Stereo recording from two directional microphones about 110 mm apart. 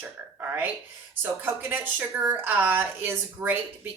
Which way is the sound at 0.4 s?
15° right (ahead or behind).